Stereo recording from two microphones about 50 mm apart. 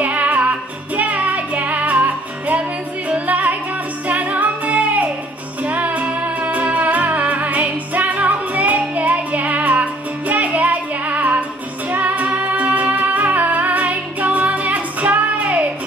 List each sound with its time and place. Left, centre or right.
0.0 s music: right